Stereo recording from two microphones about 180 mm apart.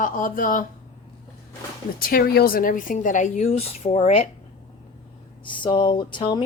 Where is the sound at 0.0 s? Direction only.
50° left (ahead or behind).